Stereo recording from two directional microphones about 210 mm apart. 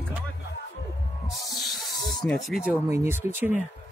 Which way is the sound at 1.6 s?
Centre (ahead or behind).